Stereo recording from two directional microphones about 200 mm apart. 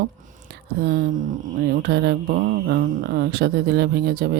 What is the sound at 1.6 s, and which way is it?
Speech, 50° right (ahead or behind).